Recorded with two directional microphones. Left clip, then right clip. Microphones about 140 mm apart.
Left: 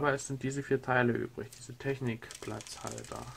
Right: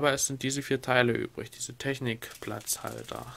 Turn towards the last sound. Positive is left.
turn(degrees=-30)  # may be behind; listen again after turning